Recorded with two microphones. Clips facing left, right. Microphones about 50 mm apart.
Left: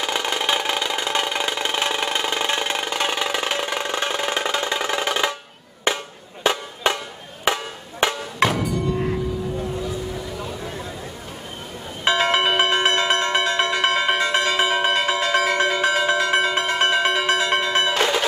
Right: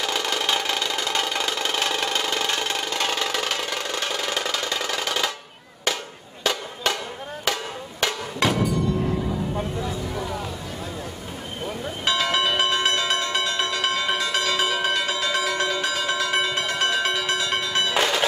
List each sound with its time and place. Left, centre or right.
0.0 s music: left
5.9 s a sound: left
6.4 s music: left
12.0 s church bell: left